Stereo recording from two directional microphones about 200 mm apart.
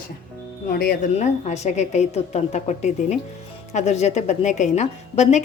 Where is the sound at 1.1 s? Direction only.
35° left (ahead or behind).